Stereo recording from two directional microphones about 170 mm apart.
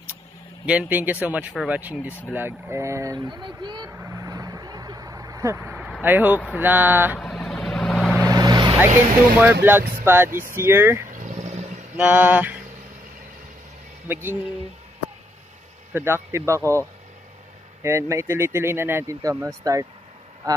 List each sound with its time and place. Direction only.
0.7 s speech: 10° right (ahead or behind); by 3.9 s 25° right (ahead or behind)
3.9 s vehicle: 15° right (ahead or behind)
7.2 s vehicle: centre (ahead or behind)
8.3 s vehicle: 25° right (ahead or behind)
9.4 s speech: 10° right (ahead or behind)
11.1 s a sound: 45° right (ahead or behind)
12.0 s speech: 10° right (ahead or behind)
14.0 s speech: 10° right (ahead or behind)
15.9 s speech: 15° right (ahead or behind)
17.8 s speech: 15° right (ahead or behind)